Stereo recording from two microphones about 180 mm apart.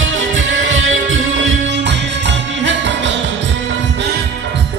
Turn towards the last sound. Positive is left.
turn(degrees=-90)